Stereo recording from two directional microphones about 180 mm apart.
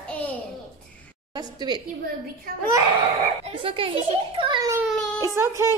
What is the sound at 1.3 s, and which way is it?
Speech, 20° right (ahead or behind).